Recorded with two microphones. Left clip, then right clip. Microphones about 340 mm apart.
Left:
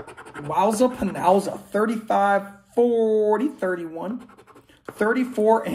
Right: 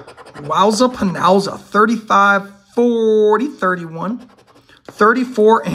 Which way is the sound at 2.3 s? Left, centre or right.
Right.